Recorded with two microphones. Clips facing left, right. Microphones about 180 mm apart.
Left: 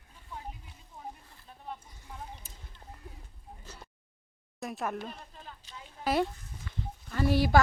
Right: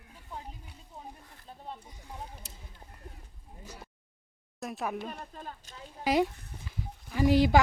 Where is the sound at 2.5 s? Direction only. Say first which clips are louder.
Right 3 dB; 75° right (ahead or behind).